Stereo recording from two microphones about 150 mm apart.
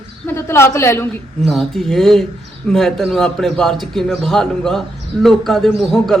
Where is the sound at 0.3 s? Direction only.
15° left (ahead or behind).